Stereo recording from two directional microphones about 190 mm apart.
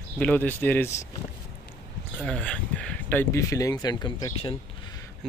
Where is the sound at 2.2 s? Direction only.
5° left (ahead or behind); by 4.5 s 20° left (ahead or behind).